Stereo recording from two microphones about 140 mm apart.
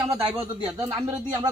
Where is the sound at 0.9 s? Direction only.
20° right (ahead or behind).